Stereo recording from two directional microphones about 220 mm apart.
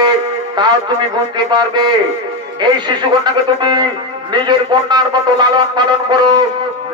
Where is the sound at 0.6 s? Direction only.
20° right (ahead or behind).